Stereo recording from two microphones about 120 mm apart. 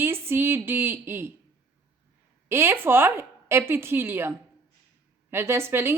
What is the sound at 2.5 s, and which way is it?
A woman's voice, 20° right (ahead or behind).